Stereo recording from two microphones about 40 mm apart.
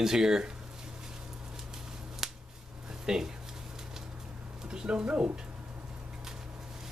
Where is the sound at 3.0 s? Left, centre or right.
Centre.